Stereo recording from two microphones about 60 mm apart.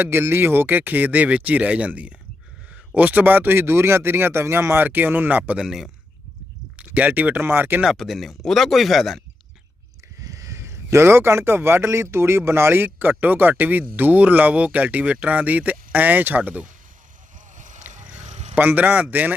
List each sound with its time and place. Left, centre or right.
0.0 s speech: right
5.5 s speech: centre
6.7 s speech: right
7.4 s speech: right
7.9 s speech: centre
10.2 s speech: right
18.5 s speech: right